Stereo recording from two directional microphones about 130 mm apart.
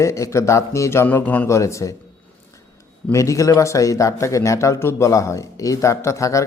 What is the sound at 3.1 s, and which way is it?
Speech, 25° left (ahead or behind).